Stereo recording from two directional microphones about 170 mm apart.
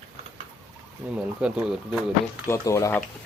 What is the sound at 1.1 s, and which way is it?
Speech, 5° right (ahead or behind).